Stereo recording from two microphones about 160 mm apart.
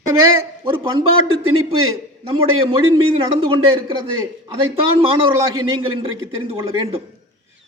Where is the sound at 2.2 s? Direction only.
35° right (ahead or behind).